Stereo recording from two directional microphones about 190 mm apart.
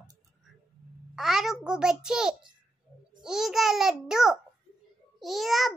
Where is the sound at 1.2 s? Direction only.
Centre (ahead or behind).